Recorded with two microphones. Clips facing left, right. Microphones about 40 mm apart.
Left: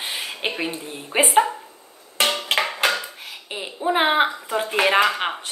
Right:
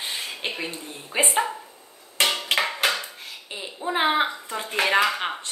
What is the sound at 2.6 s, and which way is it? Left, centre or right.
Dishes, centre.